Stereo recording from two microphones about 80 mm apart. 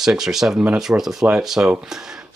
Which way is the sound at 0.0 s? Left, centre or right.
Centre.